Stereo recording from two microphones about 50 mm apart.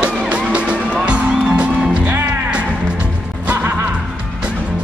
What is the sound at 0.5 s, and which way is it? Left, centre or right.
Music, right.